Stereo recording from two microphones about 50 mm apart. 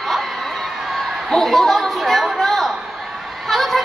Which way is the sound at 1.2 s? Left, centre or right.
Centre.